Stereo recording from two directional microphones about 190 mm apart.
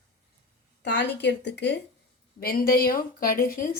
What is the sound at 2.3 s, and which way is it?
A woman's voice, 50° left (ahead or behind).